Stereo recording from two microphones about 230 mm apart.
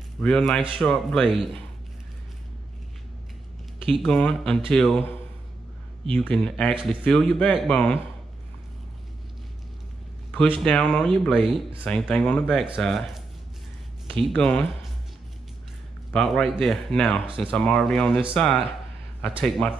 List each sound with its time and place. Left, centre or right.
0.2 s speech: centre
3.8 s speech: centre
6.1 s speech: centre
6.7 s speech: right
7.1 s speech: centre
10.6 s speech: centre
16.1 s speech: centre
19.6 s speech: centre